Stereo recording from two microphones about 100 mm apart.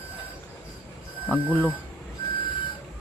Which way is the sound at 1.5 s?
15° left (ahead or behind).